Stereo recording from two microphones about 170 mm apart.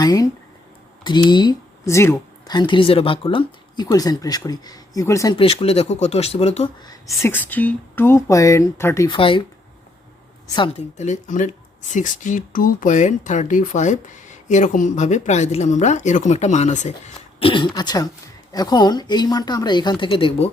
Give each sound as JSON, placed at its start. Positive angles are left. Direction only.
{"t": 0.0, "sound": "speech", "side_deg": 20}
{"t": 5.4, "sound": "speech", "side_deg": 35}
{"t": 6.8, "sound": "speech", "side_deg": 15}
{"t": 9.0, "sound": "a woman's voice", "side_deg": 30}
{"t": 10.8, "sound": "speech", "side_deg": 40}
{"t": 17.4, "sound": "speech", "side_deg": 30}